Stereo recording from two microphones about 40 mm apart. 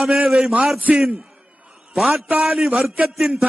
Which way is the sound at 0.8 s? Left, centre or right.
Right.